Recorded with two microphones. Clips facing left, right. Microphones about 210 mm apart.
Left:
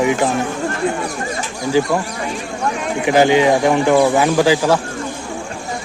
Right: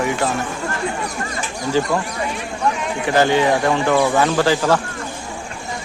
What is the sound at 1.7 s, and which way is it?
Speech, 10° left (ahead or behind).